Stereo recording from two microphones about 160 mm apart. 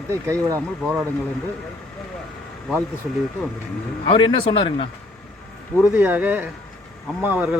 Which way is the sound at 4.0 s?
30° left (ahead or behind).